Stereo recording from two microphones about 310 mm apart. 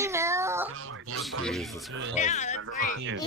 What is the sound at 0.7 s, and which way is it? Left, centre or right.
Speech, right.